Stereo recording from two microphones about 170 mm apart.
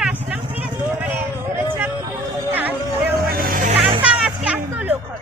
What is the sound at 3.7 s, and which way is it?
Vehicle, 35° right (ahead or behind).